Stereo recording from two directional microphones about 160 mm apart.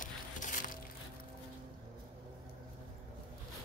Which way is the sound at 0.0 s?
55° left (ahead or behind).